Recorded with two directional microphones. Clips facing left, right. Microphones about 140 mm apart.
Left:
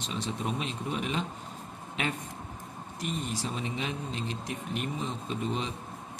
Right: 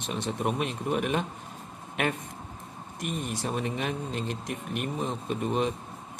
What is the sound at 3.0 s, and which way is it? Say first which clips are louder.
Speech: right 1 dB; 55° right (ahead or behind).